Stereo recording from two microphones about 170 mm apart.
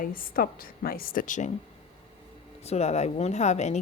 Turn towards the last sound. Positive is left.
turn(degrees=40)  # may be behind; listen again after turning